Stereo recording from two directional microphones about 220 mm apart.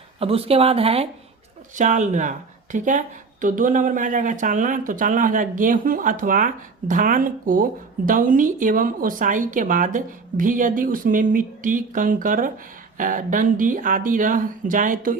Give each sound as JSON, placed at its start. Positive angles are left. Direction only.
{"t": 0.2, "sound": "speech", "side_deg": -25}